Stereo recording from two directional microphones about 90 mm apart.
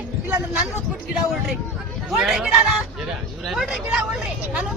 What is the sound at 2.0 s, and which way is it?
Speech, 5° right (ahead or behind).